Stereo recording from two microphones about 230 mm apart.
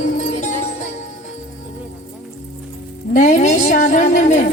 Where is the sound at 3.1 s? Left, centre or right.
Left.